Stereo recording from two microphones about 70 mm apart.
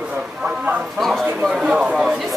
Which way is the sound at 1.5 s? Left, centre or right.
Centre.